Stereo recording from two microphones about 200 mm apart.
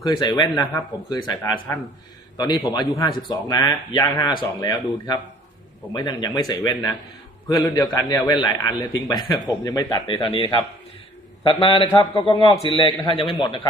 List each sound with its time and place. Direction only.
0.0 s a man's voice: 20° left (ahead or behind)